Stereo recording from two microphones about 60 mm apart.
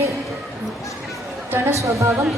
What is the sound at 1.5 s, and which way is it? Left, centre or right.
Speech, right.